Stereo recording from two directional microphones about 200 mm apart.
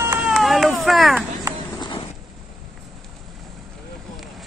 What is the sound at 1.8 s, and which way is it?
Vehicle, 25° left (ahead or behind).